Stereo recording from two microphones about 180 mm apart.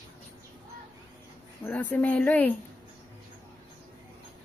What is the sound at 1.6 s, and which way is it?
Speech, 10° left (ahead or behind).